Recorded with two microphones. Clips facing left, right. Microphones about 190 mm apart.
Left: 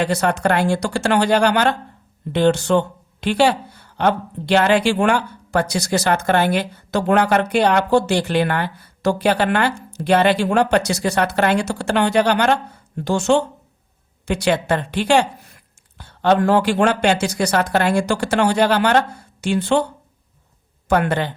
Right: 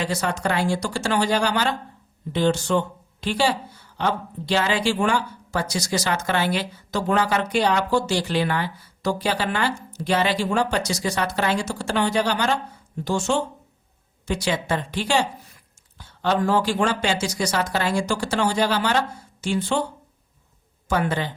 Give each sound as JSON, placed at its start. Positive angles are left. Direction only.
{"t": 0.0, "sound": "speech", "side_deg": 60}
{"t": 20.8, "sound": "speech", "side_deg": 65}